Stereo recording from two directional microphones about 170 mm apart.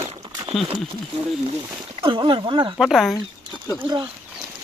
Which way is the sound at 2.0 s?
30° right (ahead or behind).